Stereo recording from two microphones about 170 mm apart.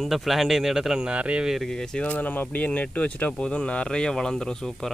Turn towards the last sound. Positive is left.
turn(degrees=5)  # may be behind; listen again after turning